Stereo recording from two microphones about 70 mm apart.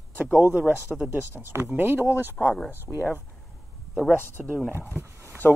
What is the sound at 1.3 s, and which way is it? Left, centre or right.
Speech, right.